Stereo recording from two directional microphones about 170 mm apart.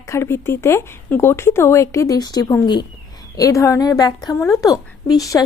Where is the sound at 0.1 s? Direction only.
15° left (ahead or behind).